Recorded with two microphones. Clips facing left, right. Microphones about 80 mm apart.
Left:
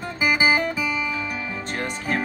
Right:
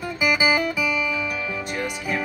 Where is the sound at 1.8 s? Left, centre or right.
Left.